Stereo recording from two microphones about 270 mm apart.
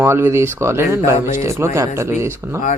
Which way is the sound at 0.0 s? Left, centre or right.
Centre.